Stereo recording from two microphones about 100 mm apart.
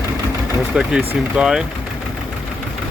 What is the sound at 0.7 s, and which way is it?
Speech, 10° right (ahead or behind).